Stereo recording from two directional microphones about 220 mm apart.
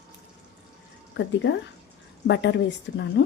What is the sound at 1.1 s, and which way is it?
A woman's voice, 55° left (ahead or behind).